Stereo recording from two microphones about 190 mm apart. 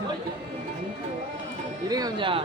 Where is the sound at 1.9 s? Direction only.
20° right (ahead or behind).